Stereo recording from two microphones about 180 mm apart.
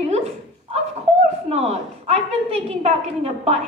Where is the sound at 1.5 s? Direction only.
35° right (ahead or behind).